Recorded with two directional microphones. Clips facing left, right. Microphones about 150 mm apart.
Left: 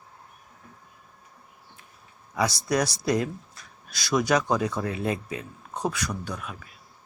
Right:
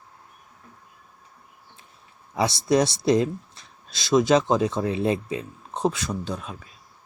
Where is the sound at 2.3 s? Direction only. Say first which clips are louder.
Right 4 dB; 25° right (ahead or behind).